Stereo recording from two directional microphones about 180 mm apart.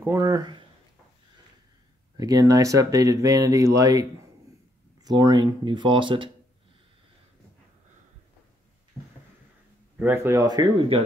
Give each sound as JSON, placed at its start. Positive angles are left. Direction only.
{"t": 0.0, "sound": "speech", "side_deg": -15}
{"t": 2.1, "sound": "speech", "side_deg": -20}
{"t": 5.0, "sound": "speech", "side_deg": -20}
{"t": 9.0, "sound": "a sound", "side_deg": -15}
{"t": 9.9, "sound": "speech", "side_deg": -10}